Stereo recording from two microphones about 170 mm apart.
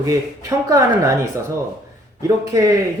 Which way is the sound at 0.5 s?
20° right (ahead or behind).